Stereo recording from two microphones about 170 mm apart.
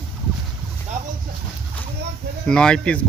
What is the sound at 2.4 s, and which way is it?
Speech, 5° left (ahead or behind).